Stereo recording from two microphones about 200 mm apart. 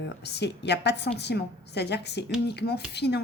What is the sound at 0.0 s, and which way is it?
Speech, 60° left (ahead or behind).